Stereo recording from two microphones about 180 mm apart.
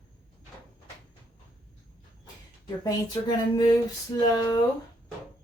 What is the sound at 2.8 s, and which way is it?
Speech, 20° left (ahead or behind).